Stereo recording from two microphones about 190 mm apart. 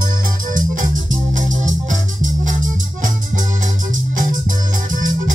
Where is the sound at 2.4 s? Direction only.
45° right (ahead or behind).